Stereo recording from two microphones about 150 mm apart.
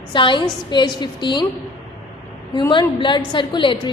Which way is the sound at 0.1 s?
35° left (ahead or behind).